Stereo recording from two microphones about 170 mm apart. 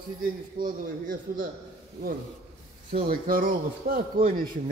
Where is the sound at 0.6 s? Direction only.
55° right (ahead or behind).